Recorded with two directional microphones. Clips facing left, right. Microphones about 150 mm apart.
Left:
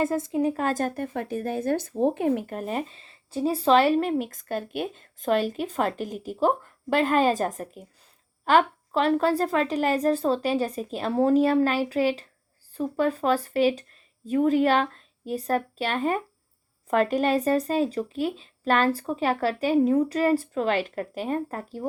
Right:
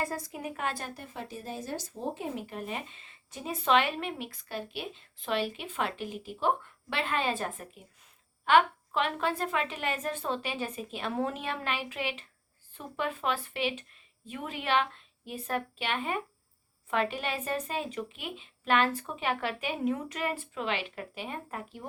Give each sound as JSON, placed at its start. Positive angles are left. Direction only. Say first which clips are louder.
{"t": 0.0, "sound": "speech", "louder": "left 11 dB", "side_deg": 20}